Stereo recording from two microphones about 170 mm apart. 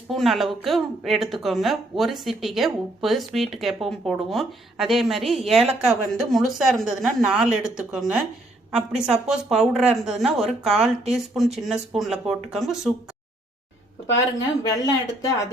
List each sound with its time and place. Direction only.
0.1 s speech: centre (ahead or behind)
14.6 s speech: 20° left (ahead or behind)